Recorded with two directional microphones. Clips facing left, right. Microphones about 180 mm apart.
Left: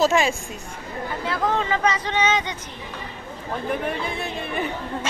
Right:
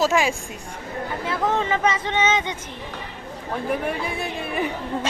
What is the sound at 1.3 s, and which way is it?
Speech, 20° right (ahead or behind).